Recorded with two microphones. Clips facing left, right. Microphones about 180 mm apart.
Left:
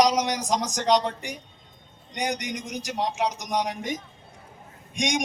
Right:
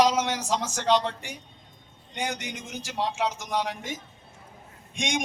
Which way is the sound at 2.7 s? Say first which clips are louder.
Left 1 dB; 20° left (ahead or behind).